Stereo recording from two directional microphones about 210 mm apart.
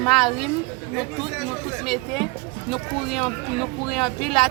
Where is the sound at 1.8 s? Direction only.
Centre (ahead or behind).